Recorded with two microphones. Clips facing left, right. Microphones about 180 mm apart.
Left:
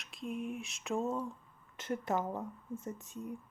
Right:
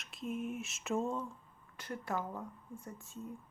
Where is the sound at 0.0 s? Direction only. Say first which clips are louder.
Even; centre (ahead or behind).